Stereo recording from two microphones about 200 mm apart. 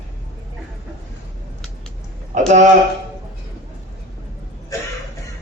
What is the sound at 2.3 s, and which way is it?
Speech, 35° right (ahead or behind).